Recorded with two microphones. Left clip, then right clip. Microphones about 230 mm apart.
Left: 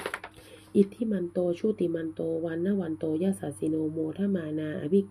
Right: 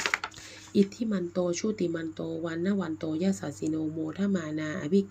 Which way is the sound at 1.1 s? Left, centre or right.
Right.